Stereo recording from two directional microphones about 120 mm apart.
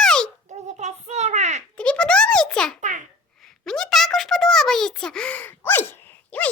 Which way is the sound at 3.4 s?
5° left (ahead or behind).